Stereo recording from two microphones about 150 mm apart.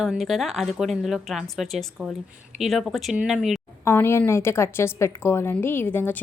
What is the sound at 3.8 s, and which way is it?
A woman's voice, 15° left (ahead or behind).